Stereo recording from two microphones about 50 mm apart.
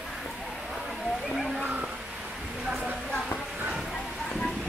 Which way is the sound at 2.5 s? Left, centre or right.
Centre.